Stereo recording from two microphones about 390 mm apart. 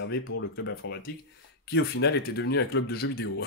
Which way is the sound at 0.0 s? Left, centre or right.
Left.